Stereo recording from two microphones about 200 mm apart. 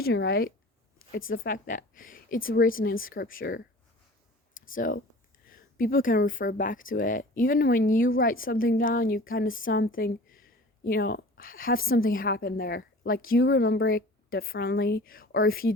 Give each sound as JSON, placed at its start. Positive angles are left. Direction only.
{"t": 0.0, "sound": "speech", "side_deg": 50}
{"t": 4.7, "sound": "speech", "side_deg": 45}